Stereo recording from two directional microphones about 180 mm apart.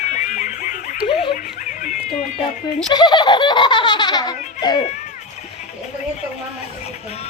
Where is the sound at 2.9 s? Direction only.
25° left (ahead or behind).